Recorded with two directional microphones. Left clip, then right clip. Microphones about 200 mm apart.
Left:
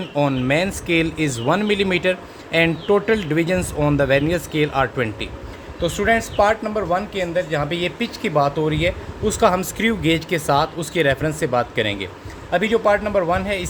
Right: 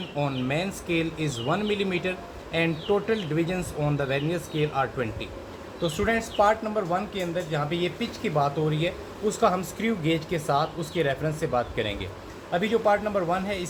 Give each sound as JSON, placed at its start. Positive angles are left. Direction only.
{"t": 0.2, "sound": "speech", "side_deg": 60}